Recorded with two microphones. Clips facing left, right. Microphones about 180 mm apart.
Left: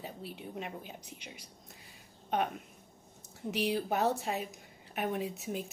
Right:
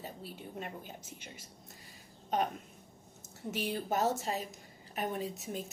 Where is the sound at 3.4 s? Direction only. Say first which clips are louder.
Left 3 dB; centre (ahead or behind).